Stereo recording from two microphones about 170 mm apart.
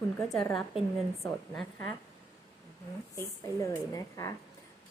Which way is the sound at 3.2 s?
15° left (ahead or behind).